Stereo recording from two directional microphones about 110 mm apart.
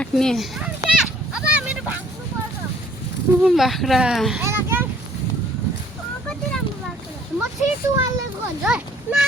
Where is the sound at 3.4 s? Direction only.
Centre (ahead or behind).